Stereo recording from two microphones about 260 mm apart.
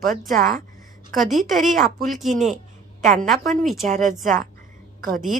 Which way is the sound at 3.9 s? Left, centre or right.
Right.